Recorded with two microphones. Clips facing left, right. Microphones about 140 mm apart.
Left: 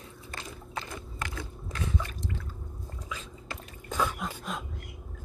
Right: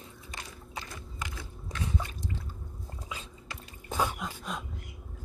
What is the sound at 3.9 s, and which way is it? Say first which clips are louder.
Throat clearing: even; 25° right (ahead or behind).